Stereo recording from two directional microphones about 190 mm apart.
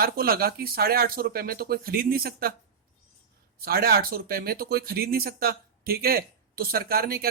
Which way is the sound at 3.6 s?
55° right (ahead or behind).